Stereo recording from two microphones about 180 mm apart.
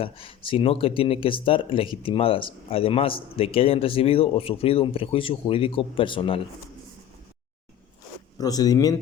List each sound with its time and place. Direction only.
0.0 s speech: 30° left (ahead or behind)
8.4 s speech: 20° left (ahead or behind)